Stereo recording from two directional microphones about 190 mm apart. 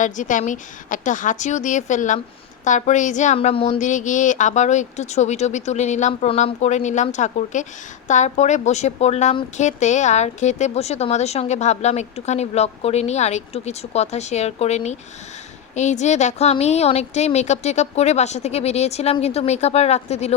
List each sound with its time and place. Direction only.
0.0 s a woman's voice: 40° left (ahead or behind)